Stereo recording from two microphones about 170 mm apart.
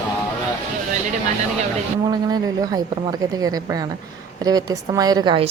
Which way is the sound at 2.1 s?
25° right (ahead or behind).